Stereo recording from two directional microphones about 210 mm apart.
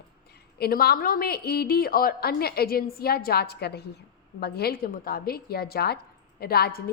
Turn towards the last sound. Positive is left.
turn(degrees=45)  # may be behind; listen again after turning